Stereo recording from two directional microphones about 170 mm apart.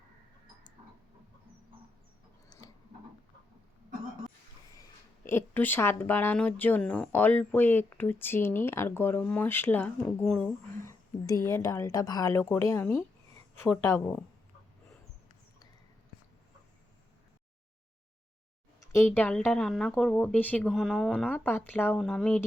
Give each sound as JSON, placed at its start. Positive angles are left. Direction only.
{"t": 5.2, "sound": "speech", "side_deg": 15}
{"t": 18.8, "sound": "speech", "side_deg": 15}